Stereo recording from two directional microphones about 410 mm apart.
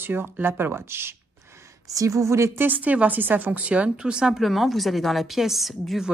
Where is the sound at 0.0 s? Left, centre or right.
Centre.